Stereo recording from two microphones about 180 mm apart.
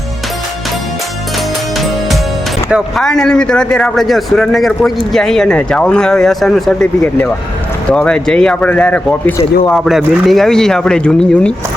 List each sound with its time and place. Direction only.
2.6 s speech: centre (ahead or behind)